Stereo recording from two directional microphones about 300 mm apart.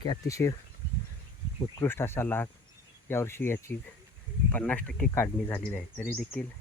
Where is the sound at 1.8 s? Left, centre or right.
Centre.